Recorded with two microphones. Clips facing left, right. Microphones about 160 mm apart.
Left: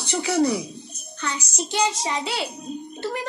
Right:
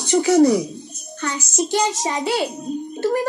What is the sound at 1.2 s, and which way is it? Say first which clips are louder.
A woman's voice: right 6 dB; 45° right (ahead or behind).